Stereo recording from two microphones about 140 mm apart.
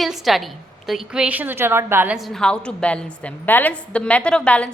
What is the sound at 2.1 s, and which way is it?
A woman's voice, centre (ahead or behind).